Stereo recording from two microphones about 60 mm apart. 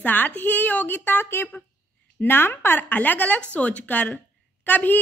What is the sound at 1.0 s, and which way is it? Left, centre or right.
Speech, left.